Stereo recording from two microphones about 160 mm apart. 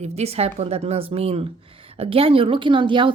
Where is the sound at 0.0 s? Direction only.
40° right (ahead or behind).